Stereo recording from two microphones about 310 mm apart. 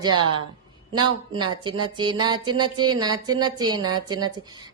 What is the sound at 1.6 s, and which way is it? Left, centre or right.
Speech, centre.